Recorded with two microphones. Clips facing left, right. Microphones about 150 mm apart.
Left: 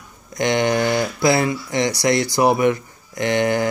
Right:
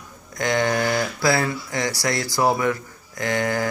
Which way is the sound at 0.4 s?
20° left (ahead or behind).